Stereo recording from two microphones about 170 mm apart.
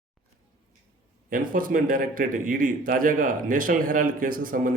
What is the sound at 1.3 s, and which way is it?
A man's voice, 55° right (ahead or behind).